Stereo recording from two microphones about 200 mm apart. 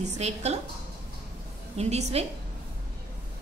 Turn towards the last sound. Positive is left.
turn(degrees=-30)  # may be behind; listen again after turning